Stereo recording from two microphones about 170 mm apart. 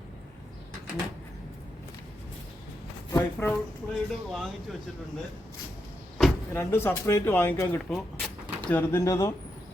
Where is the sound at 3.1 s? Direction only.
15° left (ahead or behind).